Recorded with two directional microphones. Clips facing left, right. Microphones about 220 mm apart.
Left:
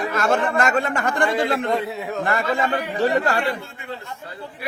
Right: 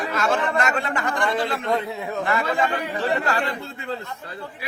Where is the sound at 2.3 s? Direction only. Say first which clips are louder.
Left 1 dB; 45° left (ahead or behind).